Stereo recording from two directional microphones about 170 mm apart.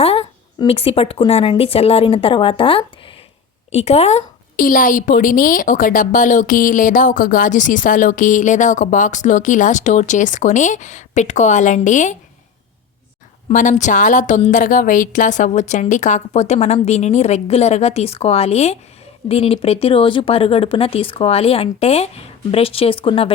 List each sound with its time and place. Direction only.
0.0 s a sound: 35° left (ahead or behind)
0.7 s a woman's voice: 35° left (ahead or behind)
4.5 s a woman's voice: 55° left (ahead or behind)
13.5 s a woman's voice: 50° left (ahead or behind); by 23.3 s 30° left (ahead or behind)